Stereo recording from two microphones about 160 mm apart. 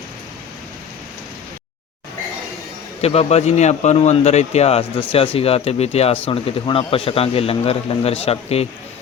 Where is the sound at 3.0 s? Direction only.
40° left (ahead or behind).